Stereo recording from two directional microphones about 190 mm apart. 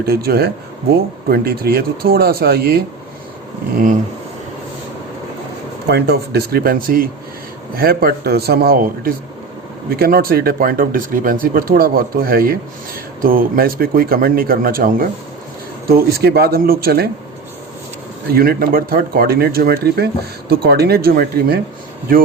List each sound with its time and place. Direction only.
0.0 s speech: 55° right (ahead or behind)
5.9 s speech: 55° right (ahead or behind)
18.3 s speech: 50° right (ahead or behind)